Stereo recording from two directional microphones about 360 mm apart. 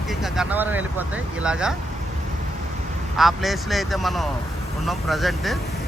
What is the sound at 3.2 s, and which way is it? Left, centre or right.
Speech, centre.